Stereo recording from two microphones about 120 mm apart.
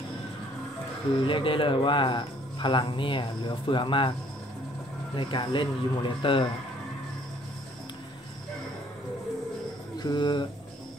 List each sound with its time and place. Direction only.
1.2 s speech: 45° left (ahead or behind)
5.1 s speech: 45° left (ahead or behind)
9.9 s speech: 35° left (ahead or behind)